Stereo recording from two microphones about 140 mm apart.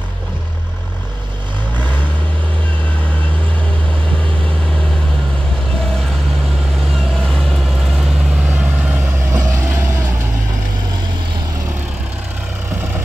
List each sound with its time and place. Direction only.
7.2 s vehicle: 5° left (ahead or behind)
8.5 s vehicle: 15° right (ahead or behind)